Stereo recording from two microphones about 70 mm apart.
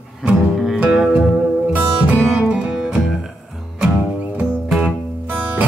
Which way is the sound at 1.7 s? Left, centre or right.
Centre.